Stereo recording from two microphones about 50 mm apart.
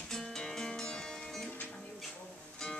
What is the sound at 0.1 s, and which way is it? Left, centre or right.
Music, centre.